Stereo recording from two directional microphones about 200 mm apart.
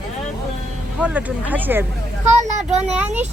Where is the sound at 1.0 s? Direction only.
5° right (ahead or behind).